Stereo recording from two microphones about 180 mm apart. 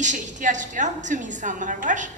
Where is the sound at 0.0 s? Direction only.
45° right (ahead or behind).